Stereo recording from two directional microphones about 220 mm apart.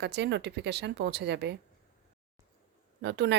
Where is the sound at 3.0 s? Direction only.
50° right (ahead or behind).